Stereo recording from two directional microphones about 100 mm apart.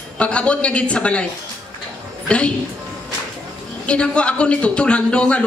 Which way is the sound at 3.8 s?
10° left (ahead or behind).